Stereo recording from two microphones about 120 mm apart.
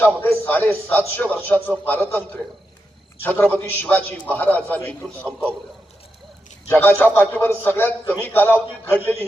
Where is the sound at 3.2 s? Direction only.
15° left (ahead or behind).